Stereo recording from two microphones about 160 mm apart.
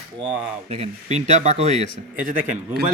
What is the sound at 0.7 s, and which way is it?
Speech, 45° right (ahead or behind).